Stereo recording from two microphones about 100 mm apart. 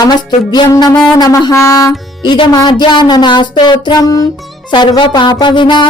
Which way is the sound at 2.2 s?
45° left (ahead or behind).